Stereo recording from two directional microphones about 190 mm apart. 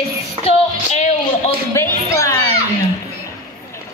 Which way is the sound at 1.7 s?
15° left (ahead or behind).